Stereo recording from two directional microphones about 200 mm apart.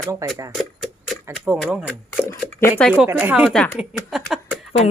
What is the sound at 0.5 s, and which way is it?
Speech, centre (ahead or behind).